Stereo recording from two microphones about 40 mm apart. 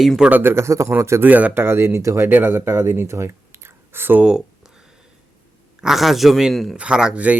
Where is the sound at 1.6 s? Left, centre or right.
Right.